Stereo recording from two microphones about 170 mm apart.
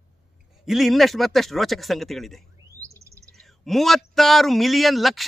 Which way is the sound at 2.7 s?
15° right (ahead or behind).